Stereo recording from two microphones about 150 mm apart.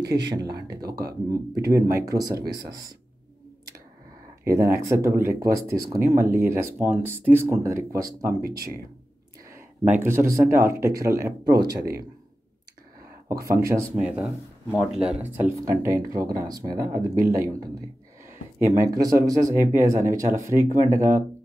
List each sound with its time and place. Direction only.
0.0 s speech: 25° right (ahead or behind)
0.7 s speech: 90° right
1.3 s speech: 20° right (ahead or behind)
4.5 s speech: 20° right (ahead or behind)
8.4 s speech: 90° right
9.5 s speech: 15° right (ahead or behind)
13.6 s speech: 20° right (ahead or behind)
13.9 s speech: 5° right (ahead or behind)
15.5 s speech: 20° right (ahead or behind)